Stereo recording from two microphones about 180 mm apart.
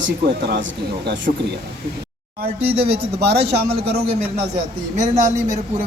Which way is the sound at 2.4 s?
30° right (ahead or behind).